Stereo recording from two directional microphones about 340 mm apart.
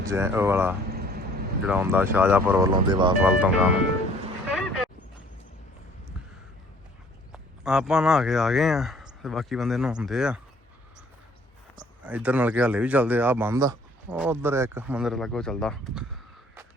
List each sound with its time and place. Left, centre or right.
0.0 s speech: centre
0.9 s vehicle: right
1.6 s speech: centre
7.3 s speech: centre
11.8 s speech: centre